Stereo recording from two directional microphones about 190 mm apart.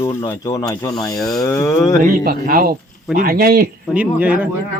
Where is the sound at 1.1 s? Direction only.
Centre (ahead or behind).